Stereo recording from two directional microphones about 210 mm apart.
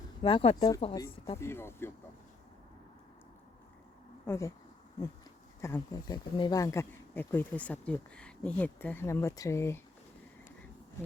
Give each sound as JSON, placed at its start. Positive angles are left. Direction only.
{"t": 0.2, "sound": "speech", "side_deg": 25}
{"t": 4.3, "sound": "speech", "side_deg": 15}
{"t": 5.5, "sound": "speech", "side_deg": 15}